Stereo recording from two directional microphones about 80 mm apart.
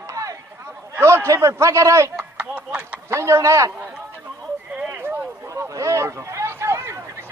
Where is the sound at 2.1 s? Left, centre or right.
Centre.